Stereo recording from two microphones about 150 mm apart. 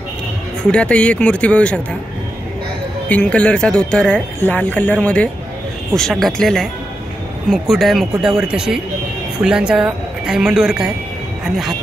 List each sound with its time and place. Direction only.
0.7 s speech: 5° left (ahead or behind)
3.1 s speech: 10° left (ahead or behind)